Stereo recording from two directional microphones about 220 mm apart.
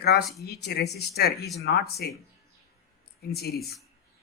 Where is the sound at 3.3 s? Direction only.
45° left (ahead or behind).